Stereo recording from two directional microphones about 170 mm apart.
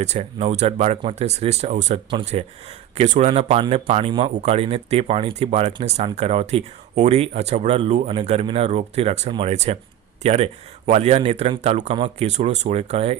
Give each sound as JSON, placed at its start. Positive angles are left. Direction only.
{"t": 0.0, "sound": "speech", "side_deg": -40}